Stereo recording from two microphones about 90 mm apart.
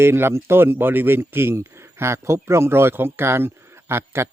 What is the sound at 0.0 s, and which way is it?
Speech, 30° right (ahead or behind).